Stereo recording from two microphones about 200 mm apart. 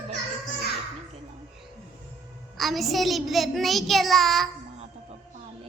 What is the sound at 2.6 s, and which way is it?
Child singing, centre (ahead or behind).